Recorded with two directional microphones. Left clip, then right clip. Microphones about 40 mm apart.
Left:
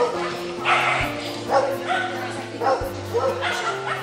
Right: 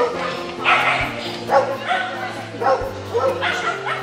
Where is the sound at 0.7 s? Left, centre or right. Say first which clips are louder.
Right 4 dB; right.